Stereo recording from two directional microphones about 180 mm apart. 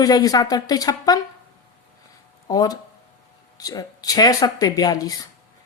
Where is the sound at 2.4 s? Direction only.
20° left (ahead or behind).